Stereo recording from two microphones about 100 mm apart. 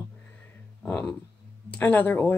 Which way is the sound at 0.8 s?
10° left (ahead or behind).